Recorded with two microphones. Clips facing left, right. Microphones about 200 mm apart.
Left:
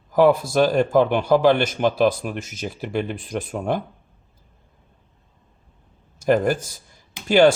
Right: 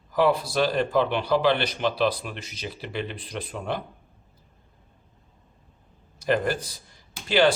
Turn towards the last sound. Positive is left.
turn(degrees=45)  # may be behind; listen again after turning